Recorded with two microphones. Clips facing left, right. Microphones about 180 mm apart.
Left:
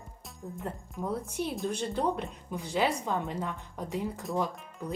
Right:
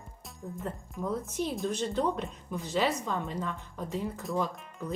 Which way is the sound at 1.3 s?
15° left (ahead or behind).